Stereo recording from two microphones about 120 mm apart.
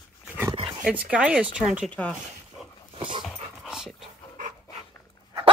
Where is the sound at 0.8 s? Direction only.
10° right (ahead or behind).